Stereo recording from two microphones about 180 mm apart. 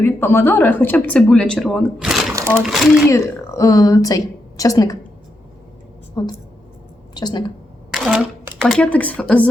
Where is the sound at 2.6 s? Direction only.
Centre (ahead or behind).